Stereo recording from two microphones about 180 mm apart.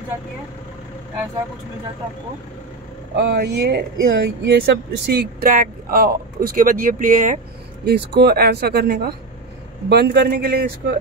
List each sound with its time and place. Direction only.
3.3 s speech: 60° right (ahead or behind)
7.8 s a man's voice: 70° right (ahead or behind)